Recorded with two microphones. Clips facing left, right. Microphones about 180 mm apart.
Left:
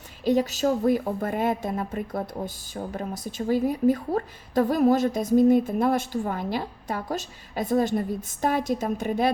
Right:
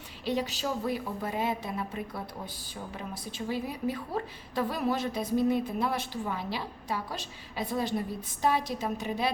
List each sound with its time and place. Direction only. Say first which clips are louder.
0.3 s a woman's voice: left 9 dB; 45° left (ahead or behind)